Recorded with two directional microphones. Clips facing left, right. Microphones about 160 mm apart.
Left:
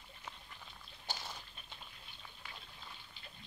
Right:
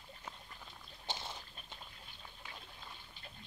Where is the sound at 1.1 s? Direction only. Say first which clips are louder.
Right 2 dB; 25° right (ahead or behind).